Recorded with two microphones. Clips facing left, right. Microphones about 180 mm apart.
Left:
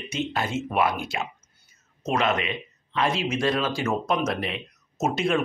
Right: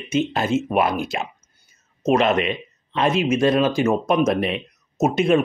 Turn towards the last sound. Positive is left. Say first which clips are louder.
# right 7 dB
turn(degrees=-20)  # may be behind; listen again after turning